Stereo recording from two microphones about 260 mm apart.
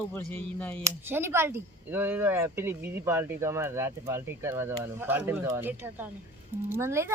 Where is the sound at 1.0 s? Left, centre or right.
Centre.